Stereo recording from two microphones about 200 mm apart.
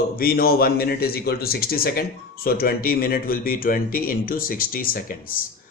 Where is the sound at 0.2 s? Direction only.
45° left (ahead or behind).